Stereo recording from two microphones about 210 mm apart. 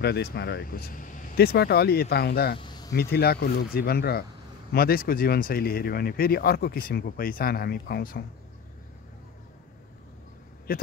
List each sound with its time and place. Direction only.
0.0 s speech: 50° left (ahead or behind)
2.6 s a sound: 20° left (ahead or behind)
3.0 s speech: 50° left (ahead or behind)
10.7 s speech: 45° left (ahead or behind)